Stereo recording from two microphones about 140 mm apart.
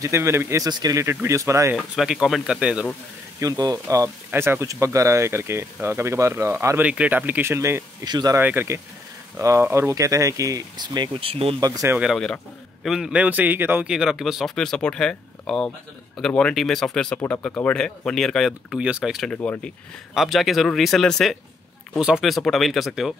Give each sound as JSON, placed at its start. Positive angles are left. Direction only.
{"t": 0.0, "sound": "speech", "side_deg": -20}
{"t": 0.7, "sound": "speech", "side_deg": -30}
{"t": 2.0, "sound": "a man's voice", "side_deg": -5}
{"t": 3.3, "sound": "speech", "side_deg": -25}
{"t": 6.8, "sound": "speech", "side_deg": -10}
{"t": 8.4, "sound": "speech", "side_deg": -15}
{"t": 11.6, "sound": "speech", "side_deg": -25}
{"t": 12.0, "sound": "a man's voice", "side_deg": 0}
{"t": 19.3, "sound": "speech", "side_deg": 10}
{"t": 20.2, "sound": "a man's voice", "side_deg": 0}